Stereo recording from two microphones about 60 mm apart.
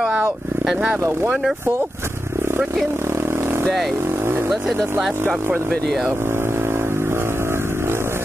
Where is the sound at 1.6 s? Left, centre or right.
Right.